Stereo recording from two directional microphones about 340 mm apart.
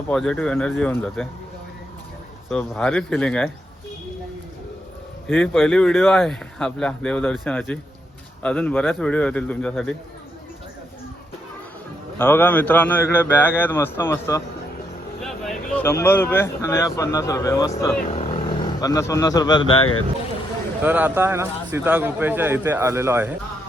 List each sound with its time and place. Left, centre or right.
0.1 s a man's voice: centre
2.5 s a man's voice: centre
5.3 s a man's voice: centre
12.2 s a man's voice: centre
19.8 s speech: left
20.8 s a man's voice: centre